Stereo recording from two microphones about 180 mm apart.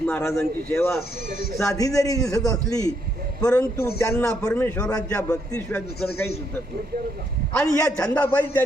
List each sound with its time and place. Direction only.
0.0 s a man's voice: 15° left (ahead or behind)
3.4 s a man's voice: 5° left (ahead or behind)
5.5 s speech: 5° left (ahead or behind)
7.6 s speech: 20° left (ahead or behind)
7.9 s speech: 5° left (ahead or behind)